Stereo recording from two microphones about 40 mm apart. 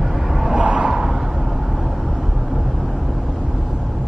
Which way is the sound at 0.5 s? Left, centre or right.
Right.